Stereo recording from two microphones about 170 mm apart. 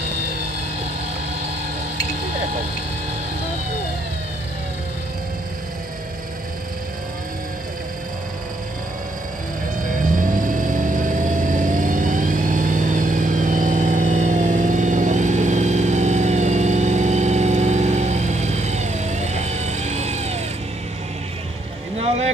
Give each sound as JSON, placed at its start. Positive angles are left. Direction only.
{"t": 10.1, "sound": "vehicle", "side_deg": -50}
{"t": 21.9, "sound": "boat", "side_deg": -40}